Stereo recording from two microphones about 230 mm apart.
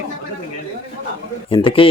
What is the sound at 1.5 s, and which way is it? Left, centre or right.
Speech, left.